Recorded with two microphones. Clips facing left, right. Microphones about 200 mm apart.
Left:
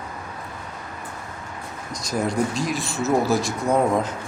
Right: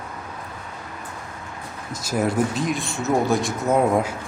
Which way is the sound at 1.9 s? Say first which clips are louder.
Right 2 dB; 5° right (ahead or behind).